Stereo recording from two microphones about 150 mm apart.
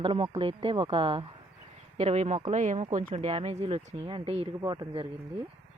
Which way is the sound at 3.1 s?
40° right (ahead or behind).